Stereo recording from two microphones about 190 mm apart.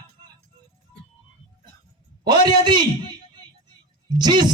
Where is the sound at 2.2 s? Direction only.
25° right (ahead or behind).